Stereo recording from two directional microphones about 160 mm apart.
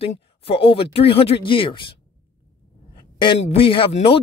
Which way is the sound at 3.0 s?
30° left (ahead or behind).